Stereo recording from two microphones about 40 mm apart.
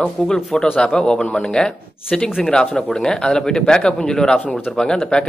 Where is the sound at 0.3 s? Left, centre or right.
Centre.